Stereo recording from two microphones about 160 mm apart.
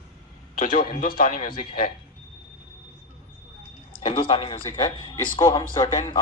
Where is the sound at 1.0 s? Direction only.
60° left (ahead or behind).